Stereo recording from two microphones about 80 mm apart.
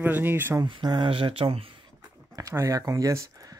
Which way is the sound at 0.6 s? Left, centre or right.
Right.